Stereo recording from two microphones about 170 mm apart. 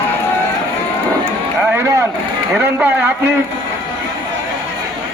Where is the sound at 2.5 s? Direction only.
10° right (ahead or behind).